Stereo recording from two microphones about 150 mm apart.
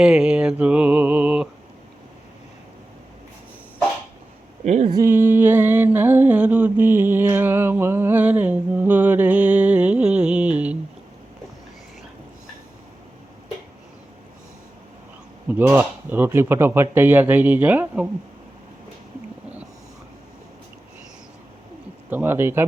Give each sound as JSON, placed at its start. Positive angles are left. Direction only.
{"t": 0.0, "sound": "speech", "side_deg": -5}
{"t": 4.6, "sound": "speech", "side_deg": -50}
{"t": 4.9, "sound": "music", "side_deg": -20}
{"t": 15.4, "sound": "speech", "side_deg": -15}
{"t": 22.1, "sound": "speech", "side_deg": -15}